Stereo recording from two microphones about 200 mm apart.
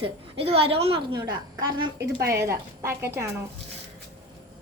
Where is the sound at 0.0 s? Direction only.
30° right (ahead or behind); by 3.2 s 15° right (ahead or behind).